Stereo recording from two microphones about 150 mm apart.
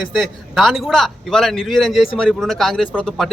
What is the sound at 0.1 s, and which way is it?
A man's voice, centre (ahead or behind).